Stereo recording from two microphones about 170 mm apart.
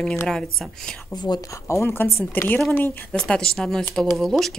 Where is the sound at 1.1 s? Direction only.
25° left (ahead or behind).